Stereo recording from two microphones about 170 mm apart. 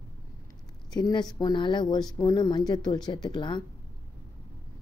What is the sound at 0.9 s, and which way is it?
Speech, 25° left (ahead or behind).